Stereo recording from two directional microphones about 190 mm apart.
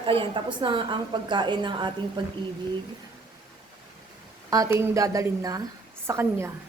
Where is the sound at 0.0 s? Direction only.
25° right (ahead or behind).